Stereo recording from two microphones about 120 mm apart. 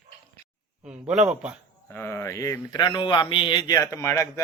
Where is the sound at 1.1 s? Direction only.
10° right (ahead or behind).